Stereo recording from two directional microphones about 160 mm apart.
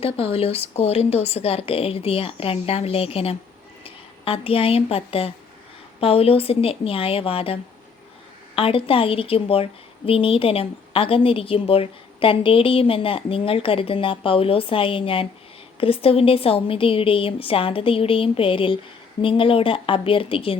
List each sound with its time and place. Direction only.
0.0 s a woman's voice: 35° left (ahead or behind)